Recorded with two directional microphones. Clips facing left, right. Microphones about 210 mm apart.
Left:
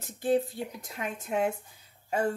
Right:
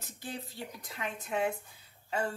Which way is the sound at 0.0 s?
50° left (ahead or behind).